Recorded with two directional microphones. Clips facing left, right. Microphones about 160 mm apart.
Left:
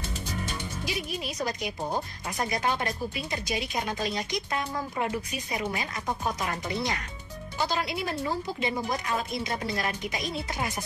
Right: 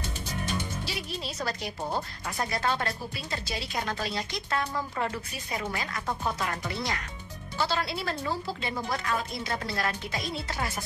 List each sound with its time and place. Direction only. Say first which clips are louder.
0.8 s speech: left 3 dB; 15° left (ahead or behind)